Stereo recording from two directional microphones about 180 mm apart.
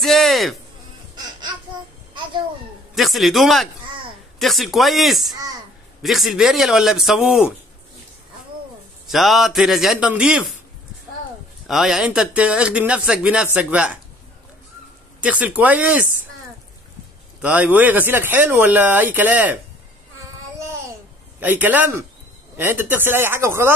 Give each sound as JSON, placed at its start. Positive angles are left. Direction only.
{"t": 0.0, "sound": "music", "side_deg": 0}
{"t": 1.1, "sound": "music", "side_deg": -25}
{"t": 2.9, "sound": "a man's voice", "side_deg": 0}
{"t": 9.1, "sound": "speech", "side_deg": 0}
{"t": 11.6, "sound": "speech", "side_deg": 0}
{"t": 15.2, "sound": "speech", "side_deg": -10}
{"t": 17.4, "sound": "speech", "side_deg": -10}
{"t": 21.4, "sound": "speech", "side_deg": -10}